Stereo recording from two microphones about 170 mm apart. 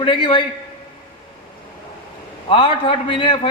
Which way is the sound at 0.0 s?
30° left (ahead or behind).